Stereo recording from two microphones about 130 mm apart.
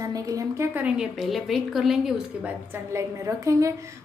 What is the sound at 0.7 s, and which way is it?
A woman's voice, 10° right (ahead or behind).